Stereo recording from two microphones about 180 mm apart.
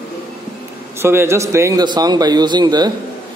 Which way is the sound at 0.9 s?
15° right (ahead or behind).